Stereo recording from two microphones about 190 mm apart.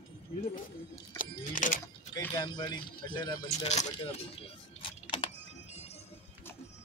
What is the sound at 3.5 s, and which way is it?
Speech, 35° left (ahead or behind).